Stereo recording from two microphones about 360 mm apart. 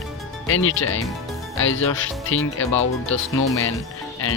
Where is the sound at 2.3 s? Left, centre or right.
Left.